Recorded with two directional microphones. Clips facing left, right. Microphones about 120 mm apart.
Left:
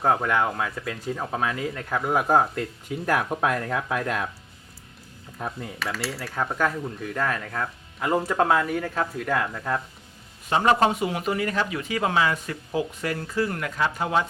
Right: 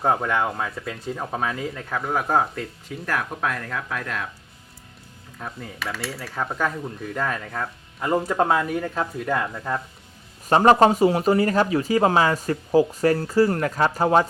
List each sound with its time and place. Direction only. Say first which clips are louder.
0.0 s cutlery: even; 5° right (ahead or behind)
3.1 s speech: left 3 dB; 15° left (ahead or behind)
5.5 s cutlery: left 1 dB; centre (ahead or behind)
10.5 s speech: right 5 dB; 40° right (ahead or behind)